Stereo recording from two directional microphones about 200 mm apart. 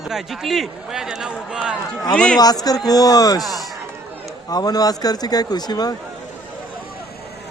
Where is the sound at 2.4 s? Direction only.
20° left (ahead or behind).